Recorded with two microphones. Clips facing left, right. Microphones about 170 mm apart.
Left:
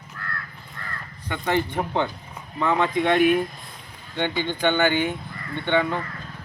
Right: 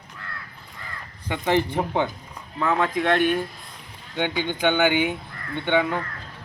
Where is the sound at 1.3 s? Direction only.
20° right (ahead or behind).